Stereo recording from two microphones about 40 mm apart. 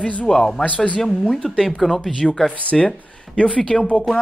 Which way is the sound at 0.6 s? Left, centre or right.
Left.